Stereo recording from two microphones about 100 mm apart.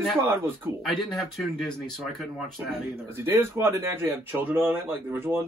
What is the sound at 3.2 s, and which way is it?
Speech, 25° right (ahead or behind).